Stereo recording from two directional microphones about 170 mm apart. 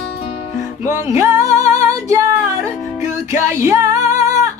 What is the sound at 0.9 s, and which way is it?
Music, 15° right (ahead or behind).